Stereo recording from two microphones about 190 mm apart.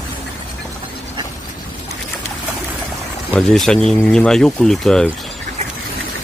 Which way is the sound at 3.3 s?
5° left (ahead or behind).